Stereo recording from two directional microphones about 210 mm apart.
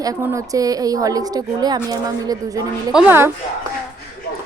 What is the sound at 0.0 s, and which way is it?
A woman's voice, 15° right (ahead or behind).